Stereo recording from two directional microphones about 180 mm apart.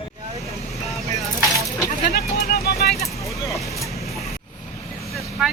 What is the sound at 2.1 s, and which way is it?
Vehicle, 60° left (ahead or behind).